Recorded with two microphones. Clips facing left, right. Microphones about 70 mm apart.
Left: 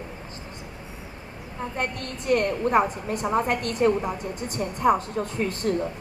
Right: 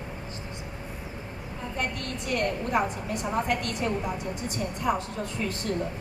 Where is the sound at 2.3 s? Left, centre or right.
Left.